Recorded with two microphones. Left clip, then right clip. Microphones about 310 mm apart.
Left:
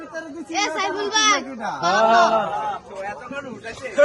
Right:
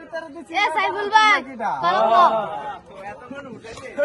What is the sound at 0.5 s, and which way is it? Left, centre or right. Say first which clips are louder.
A woman's voice: right 3 dB; right.